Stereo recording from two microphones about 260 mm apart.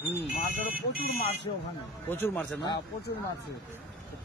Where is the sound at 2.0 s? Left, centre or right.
Centre.